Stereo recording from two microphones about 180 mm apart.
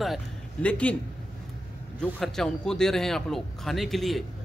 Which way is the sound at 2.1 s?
Centre (ahead or behind).